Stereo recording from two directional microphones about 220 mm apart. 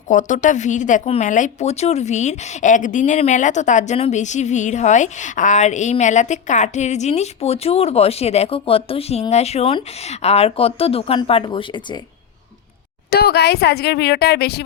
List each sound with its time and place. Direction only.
0.1 s speech: 35° left (ahead or behind)
13.1 s speech: 45° left (ahead or behind)